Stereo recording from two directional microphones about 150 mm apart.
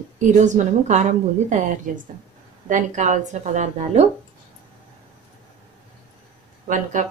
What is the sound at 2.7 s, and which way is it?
A woman's voice, 55° right (ahead or behind).